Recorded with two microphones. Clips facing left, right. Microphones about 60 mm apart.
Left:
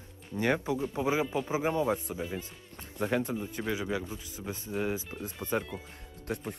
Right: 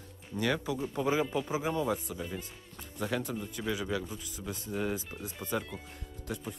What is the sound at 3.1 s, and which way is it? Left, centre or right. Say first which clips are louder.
Speech: left 4 dB; left.